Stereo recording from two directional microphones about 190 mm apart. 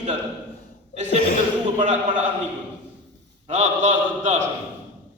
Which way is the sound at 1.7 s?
35° right (ahead or behind).